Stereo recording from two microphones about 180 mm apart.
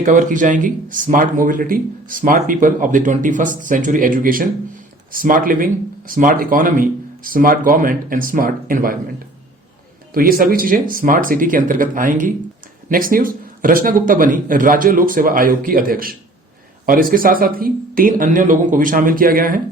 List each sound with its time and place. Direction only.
0.0 s speech: 45° right (ahead or behind)
10.2 s speech: 55° right (ahead or behind)